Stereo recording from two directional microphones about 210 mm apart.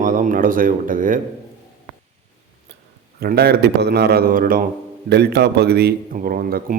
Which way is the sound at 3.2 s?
50° right (ahead or behind).